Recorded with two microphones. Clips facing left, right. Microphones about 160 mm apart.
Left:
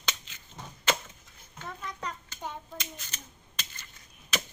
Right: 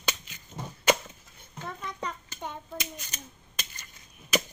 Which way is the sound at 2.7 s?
15° right (ahead or behind).